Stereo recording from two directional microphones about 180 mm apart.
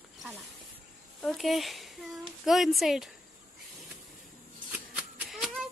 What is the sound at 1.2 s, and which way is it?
Speech, centre (ahead or behind).